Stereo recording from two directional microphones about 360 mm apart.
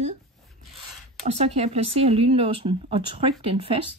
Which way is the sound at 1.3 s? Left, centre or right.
Centre.